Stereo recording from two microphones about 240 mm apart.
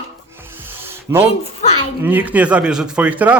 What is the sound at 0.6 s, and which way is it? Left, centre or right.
Music, centre.